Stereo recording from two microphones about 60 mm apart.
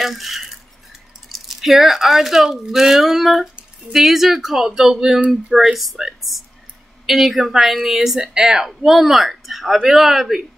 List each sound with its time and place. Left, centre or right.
0.0 s speech: centre